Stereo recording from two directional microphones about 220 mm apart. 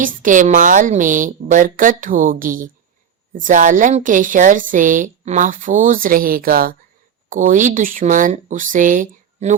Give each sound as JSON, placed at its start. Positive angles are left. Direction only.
{"t": 0.0, "sound": "a woman's voice", "side_deg": -35}